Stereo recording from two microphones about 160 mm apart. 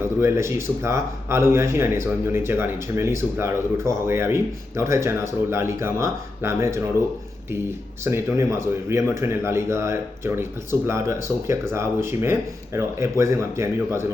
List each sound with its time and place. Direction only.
0.2 s speech: 15° right (ahead or behind)
8.0 s speech: 15° right (ahead or behind)